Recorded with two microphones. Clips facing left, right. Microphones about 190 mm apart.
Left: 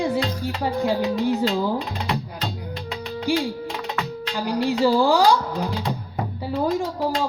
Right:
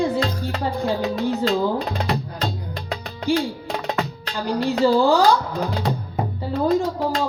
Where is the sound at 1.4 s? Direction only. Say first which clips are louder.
Right 2 dB; 40° right (ahead or behind).